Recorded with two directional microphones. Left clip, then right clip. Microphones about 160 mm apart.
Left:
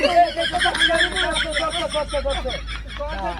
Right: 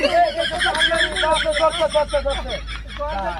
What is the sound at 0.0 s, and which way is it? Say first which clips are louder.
Speech: even; centre (ahead or behind).